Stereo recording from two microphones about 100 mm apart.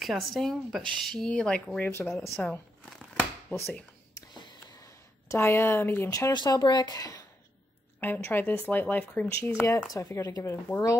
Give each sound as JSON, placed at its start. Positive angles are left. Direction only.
{"t": 0.0, "sound": "speech", "side_deg": 0}
{"t": 3.5, "sound": "speech", "side_deg": 20}
{"t": 4.4, "sound": "a sound", "side_deg": 45}
{"t": 5.4, "sound": "speech", "side_deg": 20}
{"t": 6.0, "sound": "speech", "side_deg": 35}
{"t": 6.3, "sound": "speech", "side_deg": 45}
{"t": 8.0, "sound": "speech", "side_deg": 20}
{"t": 9.5, "sound": "speech", "side_deg": 25}